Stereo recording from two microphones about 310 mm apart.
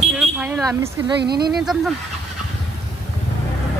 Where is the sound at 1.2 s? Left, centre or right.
Right.